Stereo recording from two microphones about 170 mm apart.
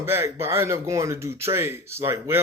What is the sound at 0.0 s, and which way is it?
Speech, 15° right (ahead or behind).